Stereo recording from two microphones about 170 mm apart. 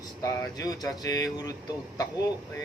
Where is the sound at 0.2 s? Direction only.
20° left (ahead or behind).